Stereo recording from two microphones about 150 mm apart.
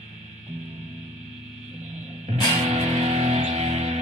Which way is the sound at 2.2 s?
50° right (ahead or behind).